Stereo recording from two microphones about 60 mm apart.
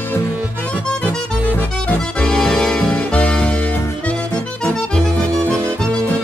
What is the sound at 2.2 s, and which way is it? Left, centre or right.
Music, centre.